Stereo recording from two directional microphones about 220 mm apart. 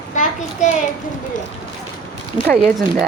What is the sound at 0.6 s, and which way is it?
Speech, 30° left (ahead or behind).